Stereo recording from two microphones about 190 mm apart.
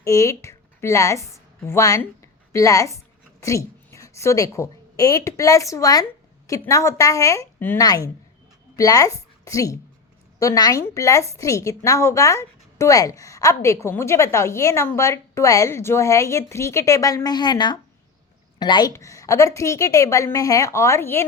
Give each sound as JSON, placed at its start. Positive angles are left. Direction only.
{"t": 0.0, "sound": "a woman's voice", "side_deg": 15}